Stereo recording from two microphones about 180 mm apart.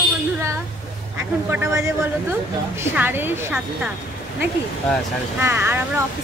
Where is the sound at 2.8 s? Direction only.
10° right (ahead or behind).